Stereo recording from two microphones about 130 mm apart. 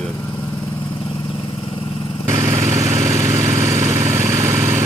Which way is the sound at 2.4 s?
20° right (ahead or behind).